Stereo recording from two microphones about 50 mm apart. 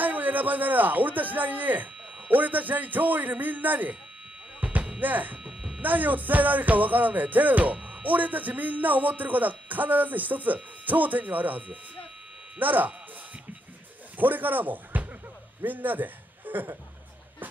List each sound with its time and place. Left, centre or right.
0.0 s a man's voice: right
2.1 s music: right
5.0 s music: right
5.4 s music: centre
5.8 s music: right
14.1 s a man's voice: right